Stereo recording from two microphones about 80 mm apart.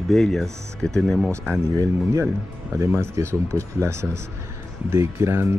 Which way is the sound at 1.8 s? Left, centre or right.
Right.